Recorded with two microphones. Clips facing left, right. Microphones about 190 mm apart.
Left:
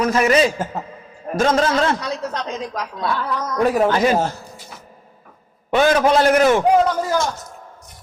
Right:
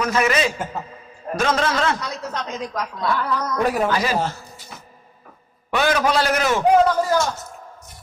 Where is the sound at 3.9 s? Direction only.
55° left (ahead or behind).